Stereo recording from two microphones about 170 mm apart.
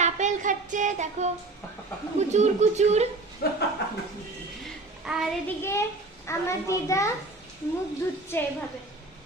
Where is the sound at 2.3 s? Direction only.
40° right (ahead or behind).